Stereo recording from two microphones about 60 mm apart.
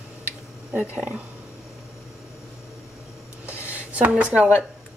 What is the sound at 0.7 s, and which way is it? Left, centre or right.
Speech, right.